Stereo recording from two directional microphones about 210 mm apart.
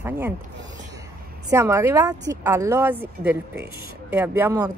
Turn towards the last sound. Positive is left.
turn(degrees=-15)  # may be behind; listen again after turning